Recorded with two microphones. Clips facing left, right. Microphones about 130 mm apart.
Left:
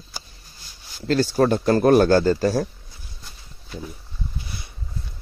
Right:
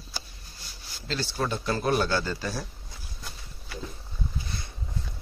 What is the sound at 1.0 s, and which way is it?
Speech, 45° left (ahead or behind).